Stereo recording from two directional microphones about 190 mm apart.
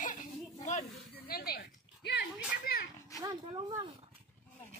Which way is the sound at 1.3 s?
55° left (ahead or behind).